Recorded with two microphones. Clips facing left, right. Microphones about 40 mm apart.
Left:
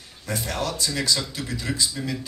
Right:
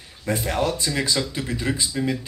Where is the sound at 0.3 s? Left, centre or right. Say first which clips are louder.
Right 5 dB; right.